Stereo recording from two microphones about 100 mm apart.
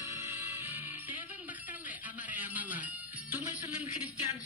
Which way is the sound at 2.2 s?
15° right (ahead or behind).